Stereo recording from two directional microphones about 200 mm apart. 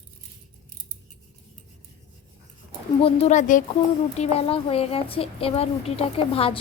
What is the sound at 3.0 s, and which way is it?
Speech, 30° left (ahead or behind).